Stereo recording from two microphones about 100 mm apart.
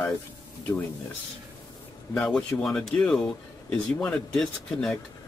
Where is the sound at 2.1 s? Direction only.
5° left (ahead or behind).